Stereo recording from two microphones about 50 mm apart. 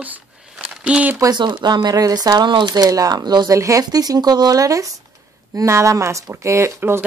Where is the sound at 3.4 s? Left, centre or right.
Right.